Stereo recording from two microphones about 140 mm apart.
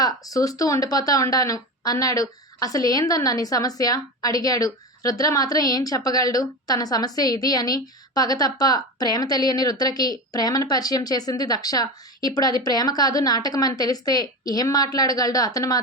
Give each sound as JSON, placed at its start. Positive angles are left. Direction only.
{"t": 0.0, "sound": "a woman's voice", "side_deg": 25}